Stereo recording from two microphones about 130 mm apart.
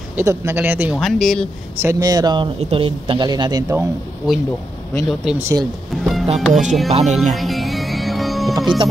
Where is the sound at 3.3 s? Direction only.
30° right (ahead or behind).